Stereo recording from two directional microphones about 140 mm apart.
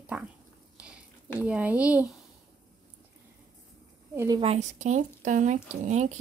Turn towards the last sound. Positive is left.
turn(degrees=-55)  # may be behind; listen again after turning